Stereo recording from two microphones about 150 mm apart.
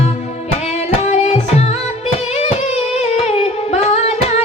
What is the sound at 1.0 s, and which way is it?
Music, 50° left (ahead or behind).